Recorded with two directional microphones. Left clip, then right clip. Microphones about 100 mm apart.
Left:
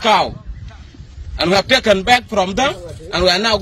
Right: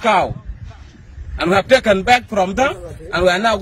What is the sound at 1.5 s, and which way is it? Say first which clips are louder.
Speech: right 1 dB; 60° right (ahead or behind).